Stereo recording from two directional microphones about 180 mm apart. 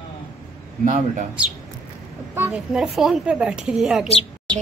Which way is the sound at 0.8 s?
45° right (ahead or behind).